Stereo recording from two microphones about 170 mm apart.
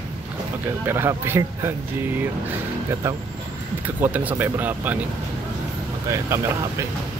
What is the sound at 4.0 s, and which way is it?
Speech, 10° right (ahead or behind).